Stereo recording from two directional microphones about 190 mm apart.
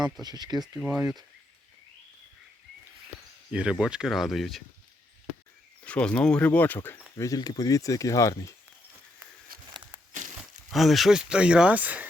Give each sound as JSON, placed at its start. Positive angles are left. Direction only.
{"t": 0.0, "sound": "speech", "side_deg": -20}
{"t": 0.8, "sound": "speech", "side_deg": -10}
{"t": 3.5, "sound": "speech", "side_deg": -5}
{"t": 5.8, "sound": "speech", "side_deg": 5}
{"t": 10.1, "sound": "a sound", "side_deg": -40}
{"t": 10.7, "sound": "speech", "side_deg": 0}